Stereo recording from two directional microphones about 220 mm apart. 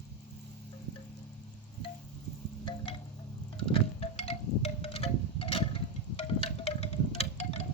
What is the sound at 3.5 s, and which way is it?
Wind chime, 25° left (ahead or behind).